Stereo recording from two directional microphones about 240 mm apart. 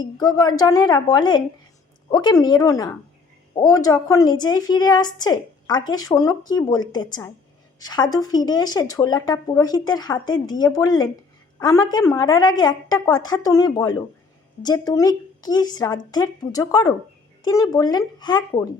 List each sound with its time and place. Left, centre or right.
0.0 s speech: centre